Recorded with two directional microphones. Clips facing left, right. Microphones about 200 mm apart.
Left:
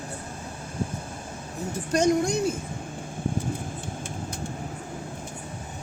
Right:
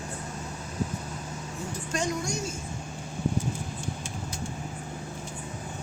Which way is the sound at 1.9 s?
45° left (ahead or behind).